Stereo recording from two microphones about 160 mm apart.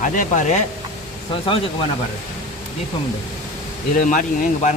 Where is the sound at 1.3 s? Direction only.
35° left (ahead or behind).